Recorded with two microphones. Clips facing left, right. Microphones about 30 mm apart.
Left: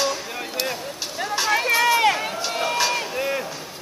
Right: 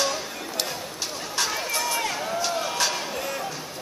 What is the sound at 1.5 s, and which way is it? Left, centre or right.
Run, left.